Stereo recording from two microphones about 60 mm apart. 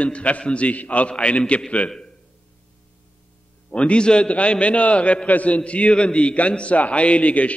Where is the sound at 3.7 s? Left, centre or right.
Centre.